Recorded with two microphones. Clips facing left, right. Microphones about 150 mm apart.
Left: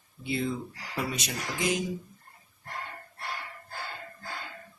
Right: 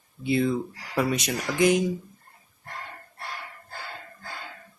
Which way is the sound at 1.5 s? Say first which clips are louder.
Right 9 dB; 65° right (ahead or behind).